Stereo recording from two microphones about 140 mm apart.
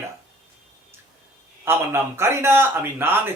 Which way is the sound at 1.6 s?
15° right (ahead or behind).